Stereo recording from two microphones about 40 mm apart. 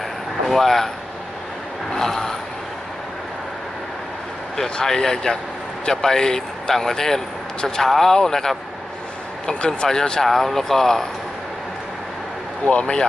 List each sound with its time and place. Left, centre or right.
0.4 s speech: centre
2.0 s a sound: centre
4.5 s speech: centre
10.2 s speech: centre
12.7 s speech: left